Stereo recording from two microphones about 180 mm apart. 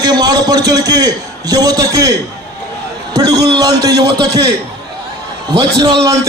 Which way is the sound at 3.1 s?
20° right (ahead or behind).